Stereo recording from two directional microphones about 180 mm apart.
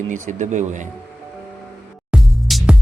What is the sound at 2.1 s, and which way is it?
Music, centre (ahead or behind).